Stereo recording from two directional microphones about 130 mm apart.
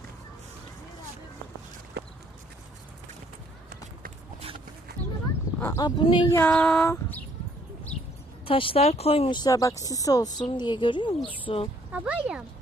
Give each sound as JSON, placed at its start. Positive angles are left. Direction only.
{"t": 5.5, "sound": "dog", "side_deg": 20}
{"t": 5.8, "sound": "speech", "side_deg": 40}
{"t": 6.4, "sound": "female singing", "side_deg": 5}
{"t": 6.8, "sound": "a sound", "side_deg": 20}
{"t": 8.4, "sound": "speech", "side_deg": 45}
{"t": 9.3, "sound": "speech", "side_deg": 30}
{"t": 11.9, "sound": "speech", "side_deg": -10}